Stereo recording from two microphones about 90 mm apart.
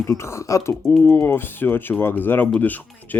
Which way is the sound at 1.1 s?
25° left (ahead or behind).